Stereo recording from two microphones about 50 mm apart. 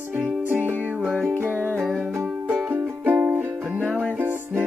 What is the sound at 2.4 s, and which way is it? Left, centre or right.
Music, right.